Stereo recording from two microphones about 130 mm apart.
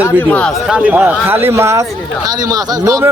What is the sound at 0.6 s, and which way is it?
Speech, 10° right (ahead or behind).